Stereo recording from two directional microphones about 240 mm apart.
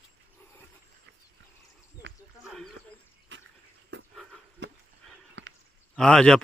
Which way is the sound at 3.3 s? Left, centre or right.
Right.